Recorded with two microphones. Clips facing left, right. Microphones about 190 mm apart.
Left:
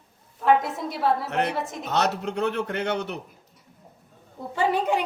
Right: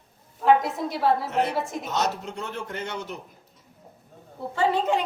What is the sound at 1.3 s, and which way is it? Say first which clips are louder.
Speech: right 1 dB; 65° left (ahead or behind).